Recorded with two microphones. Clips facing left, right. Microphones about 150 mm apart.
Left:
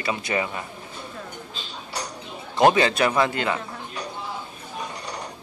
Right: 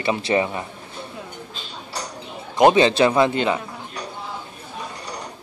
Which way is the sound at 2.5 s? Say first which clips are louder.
Right 4 dB; 20° right (ahead or behind).